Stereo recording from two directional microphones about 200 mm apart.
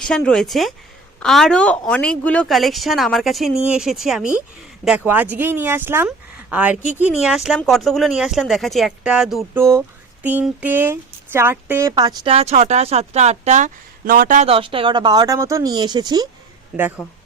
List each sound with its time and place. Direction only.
0.0 s a woman's voice: 5° left (ahead or behind)
9.6 s speech: 15° right (ahead or behind); by 14.4 s 45° right (ahead or behind)
14.4 s speech: 25° right (ahead or behind)
17.0 s speech: 10° left (ahead or behind)